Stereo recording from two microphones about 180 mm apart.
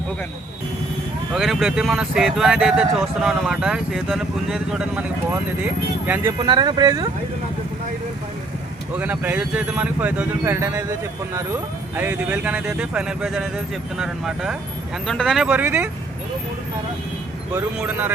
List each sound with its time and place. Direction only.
1.3 s speech: centre (ahead or behind)
6.4 s speech: 25° right (ahead or behind)
9.0 s speech: 10° right (ahead or behind)
17.5 s speech: 10° right (ahead or behind)